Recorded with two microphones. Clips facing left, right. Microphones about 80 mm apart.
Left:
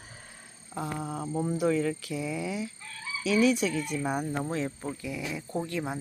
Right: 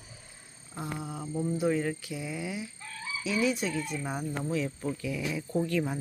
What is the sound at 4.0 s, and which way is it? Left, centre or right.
Speech, left.